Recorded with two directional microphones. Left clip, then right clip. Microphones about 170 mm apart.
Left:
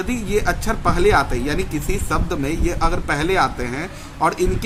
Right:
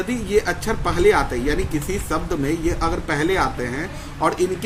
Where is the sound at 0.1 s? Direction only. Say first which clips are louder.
Right 1 dB; 35° left (ahead or behind).